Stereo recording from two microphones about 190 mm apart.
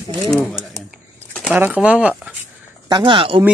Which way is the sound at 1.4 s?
5° right (ahead or behind).